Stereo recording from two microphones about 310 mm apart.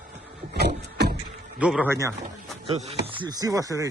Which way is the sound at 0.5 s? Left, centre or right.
Right.